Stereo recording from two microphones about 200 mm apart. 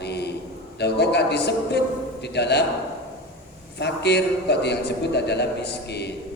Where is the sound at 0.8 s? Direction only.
55° left (ahead or behind).